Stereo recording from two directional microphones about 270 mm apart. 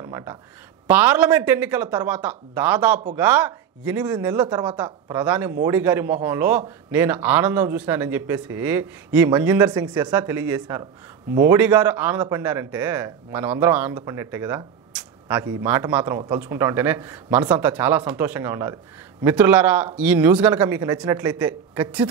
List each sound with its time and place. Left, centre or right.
0.0 s speech: centre
5.2 s speech: centre